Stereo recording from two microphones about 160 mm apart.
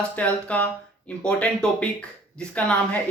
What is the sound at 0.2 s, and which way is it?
Speech, 10° left (ahead or behind).